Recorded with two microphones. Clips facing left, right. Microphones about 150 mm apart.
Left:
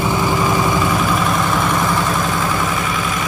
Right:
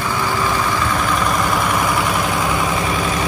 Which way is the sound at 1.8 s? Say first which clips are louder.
Left 1 dB; 10° right (ahead or behind).